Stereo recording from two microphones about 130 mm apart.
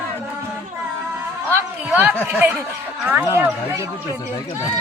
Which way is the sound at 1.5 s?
15° right (ahead or behind).